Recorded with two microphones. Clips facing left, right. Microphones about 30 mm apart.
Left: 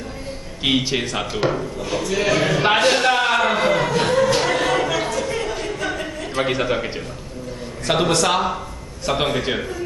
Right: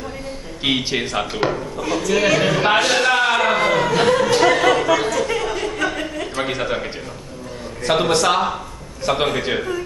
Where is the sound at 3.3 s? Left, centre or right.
Centre.